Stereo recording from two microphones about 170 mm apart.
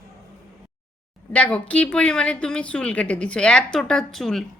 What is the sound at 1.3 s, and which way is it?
A woman's voice, 10° left (ahead or behind).